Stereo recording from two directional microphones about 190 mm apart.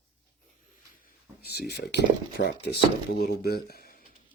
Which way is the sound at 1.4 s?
55° left (ahead or behind).